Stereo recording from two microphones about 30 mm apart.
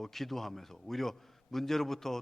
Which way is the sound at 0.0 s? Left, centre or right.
Centre.